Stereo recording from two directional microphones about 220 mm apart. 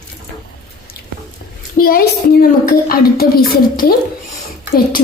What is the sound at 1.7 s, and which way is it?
A child's voice, 40° left (ahead or behind).